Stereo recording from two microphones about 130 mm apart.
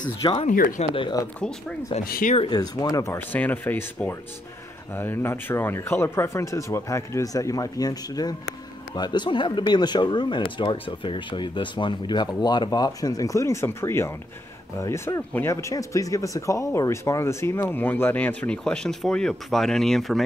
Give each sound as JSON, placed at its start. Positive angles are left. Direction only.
{"t": 0.5, "sound": "speech", "side_deg": 90}
{"t": 2.5, "sound": "speech", "side_deg": 30}